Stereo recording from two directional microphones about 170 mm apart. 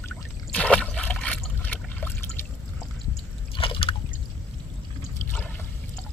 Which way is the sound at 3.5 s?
30° left (ahead or behind).